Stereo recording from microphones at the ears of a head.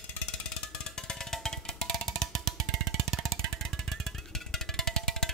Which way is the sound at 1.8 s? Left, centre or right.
Right.